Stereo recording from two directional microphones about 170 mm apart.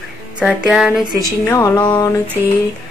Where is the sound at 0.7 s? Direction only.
5° right (ahead or behind).